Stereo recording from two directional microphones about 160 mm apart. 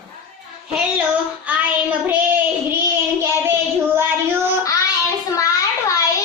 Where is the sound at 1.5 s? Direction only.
10° right (ahead or behind).